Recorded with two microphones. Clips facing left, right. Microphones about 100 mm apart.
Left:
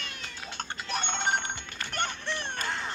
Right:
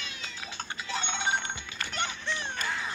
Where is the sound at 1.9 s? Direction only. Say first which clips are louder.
Left 1 dB; 55° left (ahead or behind).